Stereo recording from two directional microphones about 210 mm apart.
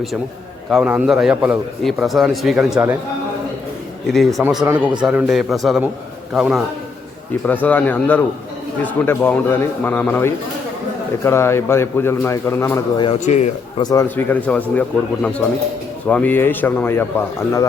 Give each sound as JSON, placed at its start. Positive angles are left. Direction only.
{"t": 0.7, "sound": "a man's voice", "side_deg": -5}
{"t": 4.0, "sound": "a man's voice", "side_deg": 0}
{"t": 13.1, "sound": "a man's voice", "side_deg": 35}
{"t": 13.8, "sound": "a man's voice", "side_deg": 15}